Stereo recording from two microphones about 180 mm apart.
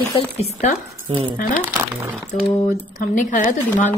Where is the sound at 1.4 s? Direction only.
50° left (ahead or behind).